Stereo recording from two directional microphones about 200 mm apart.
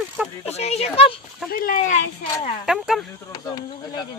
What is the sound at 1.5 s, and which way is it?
Speech, 45° left (ahead or behind).